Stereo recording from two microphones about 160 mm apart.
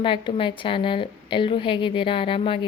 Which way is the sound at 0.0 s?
30° left (ahead or behind).